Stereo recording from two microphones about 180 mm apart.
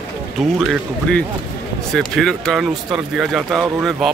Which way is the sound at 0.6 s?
5° left (ahead or behind).